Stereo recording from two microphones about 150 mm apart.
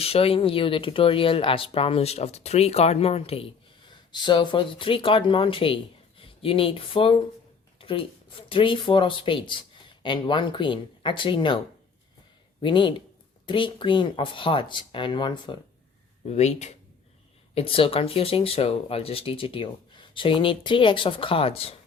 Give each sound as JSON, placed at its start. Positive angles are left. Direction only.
{"t": 0.0, "sound": "speech", "side_deg": 40}
{"t": 12.6, "sound": "speech", "side_deg": 30}
{"t": 16.2, "sound": "speech", "side_deg": 45}
{"t": 17.5, "sound": "speech", "side_deg": 40}